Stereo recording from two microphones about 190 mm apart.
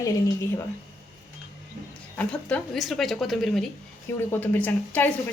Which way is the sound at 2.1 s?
5° left (ahead or behind).